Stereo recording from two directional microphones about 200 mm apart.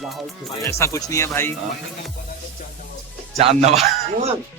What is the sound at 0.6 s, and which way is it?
Speech, 15° left (ahead or behind).